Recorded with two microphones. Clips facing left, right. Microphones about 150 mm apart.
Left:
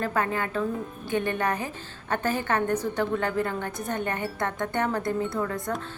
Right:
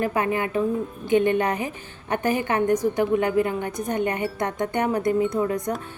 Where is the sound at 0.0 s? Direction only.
15° right (ahead or behind).